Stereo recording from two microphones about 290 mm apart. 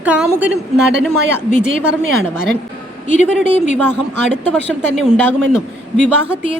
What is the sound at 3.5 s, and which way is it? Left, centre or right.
Speech, left.